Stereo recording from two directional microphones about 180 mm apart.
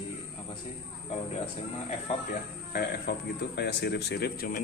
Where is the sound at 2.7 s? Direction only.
65° left (ahead or behind).